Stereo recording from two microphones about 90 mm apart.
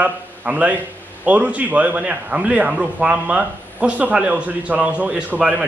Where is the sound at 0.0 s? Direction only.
15° right (ahead or behind).